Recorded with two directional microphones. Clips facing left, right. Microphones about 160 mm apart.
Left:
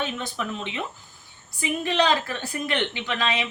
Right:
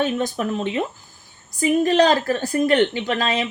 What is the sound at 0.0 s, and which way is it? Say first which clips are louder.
A woman's voice: right 8 dB; 45° right (ahead or behind).